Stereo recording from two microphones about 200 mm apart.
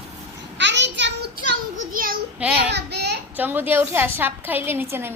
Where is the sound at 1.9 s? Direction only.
45° right (ahead or behind).